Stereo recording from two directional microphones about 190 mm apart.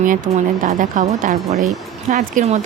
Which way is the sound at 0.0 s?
45° right (ahead or behind).